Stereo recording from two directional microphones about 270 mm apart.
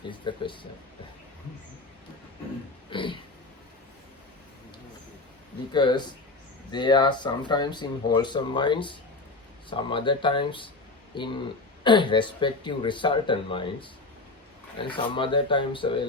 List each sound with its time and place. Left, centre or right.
0.1 s speech: centre
2.9 s a sound: centre
5.7 s speech: centre